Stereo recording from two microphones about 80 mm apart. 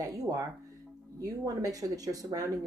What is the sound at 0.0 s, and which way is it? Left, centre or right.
Speech, right.